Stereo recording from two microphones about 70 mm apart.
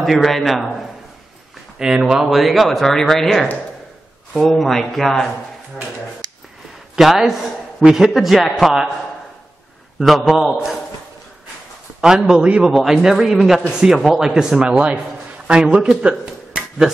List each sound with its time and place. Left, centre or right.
0.0 s a man's voice: centre
6.2 s a sound: right
7.0 s a man's voice: centre
9.9 s a man's voice: centre
12.3 s a man's voice: centre